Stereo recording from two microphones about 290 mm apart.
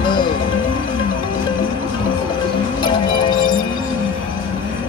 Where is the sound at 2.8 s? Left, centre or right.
Centre.